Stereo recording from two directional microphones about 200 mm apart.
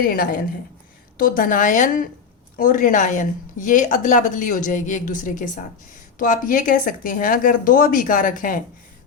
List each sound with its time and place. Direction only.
0.0 s speech: 45° left (ahead or behind)